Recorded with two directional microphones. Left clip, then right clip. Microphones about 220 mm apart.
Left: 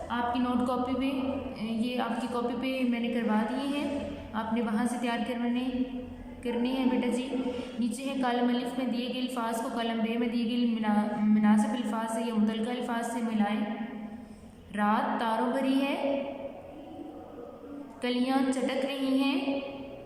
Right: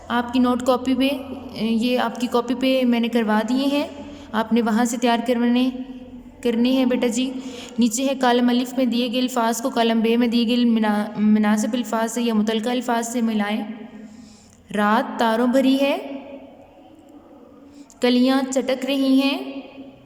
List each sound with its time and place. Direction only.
0.1 s a woman's voice: 50° right (ahead or behind)
14.7 s a woman's voice: 55° right (ahead or behind)
18.0 s a woman's voice: 50° right (ahead or behind)